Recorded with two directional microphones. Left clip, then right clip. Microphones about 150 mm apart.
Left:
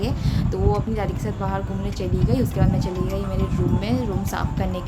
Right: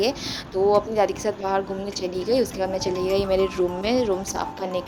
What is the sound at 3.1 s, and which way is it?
Speech, 70° right (ahead or behind).